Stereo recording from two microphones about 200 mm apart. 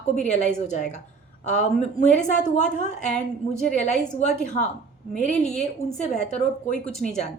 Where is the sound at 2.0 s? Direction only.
40° left (ahead or behind).